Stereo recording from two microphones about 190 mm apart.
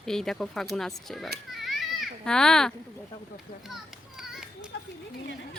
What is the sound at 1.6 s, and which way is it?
Children playing, centre (ahead or behind).